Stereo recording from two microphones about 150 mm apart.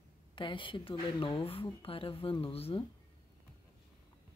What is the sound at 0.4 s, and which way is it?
Speech, 35° left (ahead or behind).